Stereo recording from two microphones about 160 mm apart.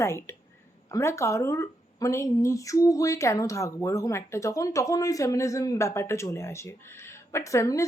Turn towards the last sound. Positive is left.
turn(degrees=20)  # may be behind; listen again after turning